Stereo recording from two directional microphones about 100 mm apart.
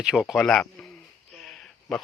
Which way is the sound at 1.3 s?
5° left (ahead or behind).